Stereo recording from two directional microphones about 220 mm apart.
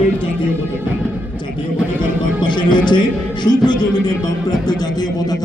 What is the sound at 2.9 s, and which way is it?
A man's voice, 20° left (ahead or behind).